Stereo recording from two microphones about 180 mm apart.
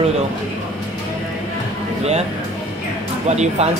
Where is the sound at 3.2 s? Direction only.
40° right (ahead or behind).